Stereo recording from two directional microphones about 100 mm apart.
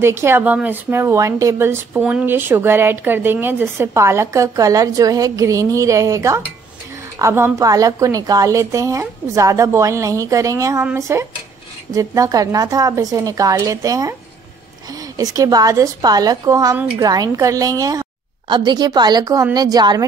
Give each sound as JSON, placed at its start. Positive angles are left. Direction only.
{"t": 0.0, "sound": "a woman's voice", "side_deg": -25}
{"t": 18.5, "sound": "a woman's voice", "side_deg": -50}